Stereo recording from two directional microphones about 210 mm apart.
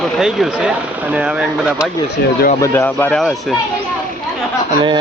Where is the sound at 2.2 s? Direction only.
50° left (ahead or behind).